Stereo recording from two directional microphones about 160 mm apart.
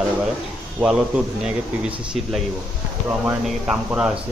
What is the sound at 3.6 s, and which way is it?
Speech, 5° right (ahead or behind).